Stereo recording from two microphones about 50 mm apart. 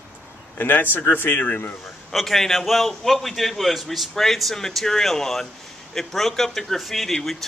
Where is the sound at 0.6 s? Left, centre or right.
Left.